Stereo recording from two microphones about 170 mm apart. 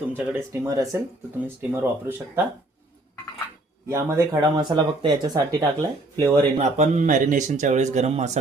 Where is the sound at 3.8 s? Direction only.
15° right (ahead or behind).